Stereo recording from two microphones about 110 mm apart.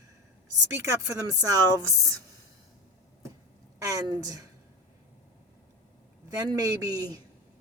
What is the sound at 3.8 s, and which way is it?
Speech, 35° right (ahead or behind).